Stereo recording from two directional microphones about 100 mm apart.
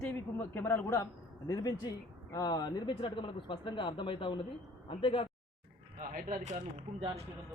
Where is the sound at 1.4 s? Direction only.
35° left (ahead or behind); by 5.3 s 60° left (ahead or behind).